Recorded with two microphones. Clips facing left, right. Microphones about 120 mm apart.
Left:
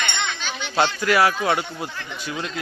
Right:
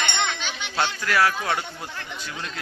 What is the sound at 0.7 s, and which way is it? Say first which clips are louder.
Speech: left 4 dB; 15° left (ahead or behind).